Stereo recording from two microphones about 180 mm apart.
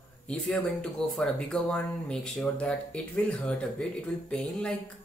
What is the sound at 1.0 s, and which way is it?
Speech, centre (ahead or behind).